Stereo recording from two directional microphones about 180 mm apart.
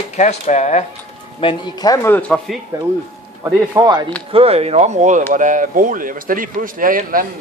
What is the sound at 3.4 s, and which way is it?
Speech, 20° right (ahead or behind).